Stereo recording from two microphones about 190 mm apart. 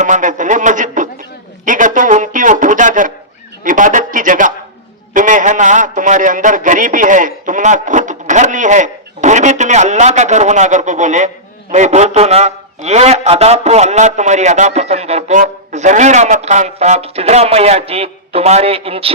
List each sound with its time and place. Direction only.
0.0 s a man's voice: 40° right (ahead or behind)